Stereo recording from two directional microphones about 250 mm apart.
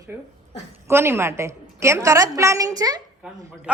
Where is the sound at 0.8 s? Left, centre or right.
Centre.